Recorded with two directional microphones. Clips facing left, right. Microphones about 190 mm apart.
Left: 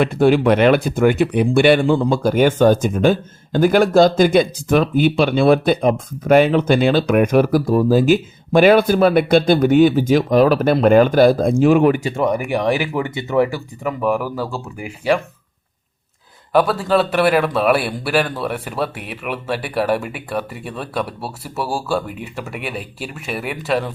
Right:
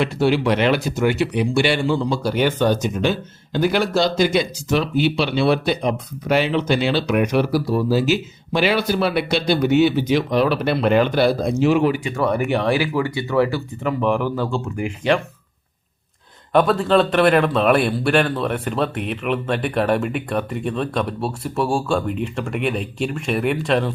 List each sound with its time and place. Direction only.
0.0 s speech: 50° left (ahead or behind)
12.2 s a man's voice: 15° left (ahead or behind)
16.5 s a man's voice: 5° left (ahead or behind)